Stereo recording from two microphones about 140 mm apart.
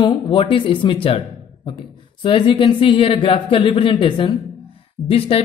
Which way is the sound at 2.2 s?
35° left (ahead or behind).